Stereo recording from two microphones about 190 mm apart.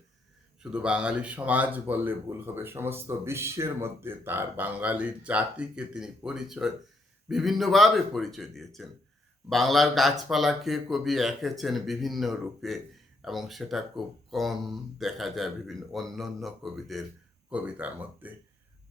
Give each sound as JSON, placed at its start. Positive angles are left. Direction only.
{"t": 0.6, "sound": "speech", "side_deg": -5}